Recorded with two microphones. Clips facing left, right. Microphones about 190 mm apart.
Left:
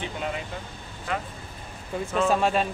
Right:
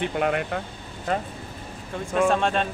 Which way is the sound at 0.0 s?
65° right (ahead or behind).